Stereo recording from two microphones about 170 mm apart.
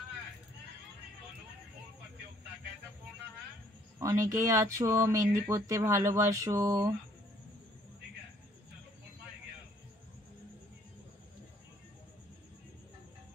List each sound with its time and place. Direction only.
4.0 s speech: 20° right (ahead or behind)